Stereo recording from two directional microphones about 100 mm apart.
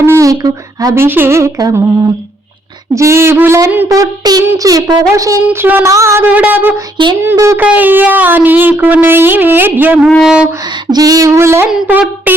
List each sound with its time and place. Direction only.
0.0 s a sound: 30° right (ahead or behind)
0.9 s music: 20° right (ahead or behind)
2.9 s music: 30° right (ahead or behind)
3.8 s a sound: 35° right (ahead or behind)
5.5 s music: 20° right (ahead or behind)
5.9 s a sound: 30° right (ahead or behind)
6.2 s speech: 15° right (ahead or behind)
6.9 s speech: 55° right (ahead or behind)
7.2 s music: 25° right (ahead or behind)
7.6 s speech: 15° right (ahead or behind)
8.8 s music: 15° right (ahead or behind)
10.2 s speech: 5° right (ahead or behind)
10.9 s a sound: 40° right (ahead or behind)
11.7 s speech: 15° right (ahead or behind)